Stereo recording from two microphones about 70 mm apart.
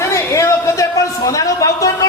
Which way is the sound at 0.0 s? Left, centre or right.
Left.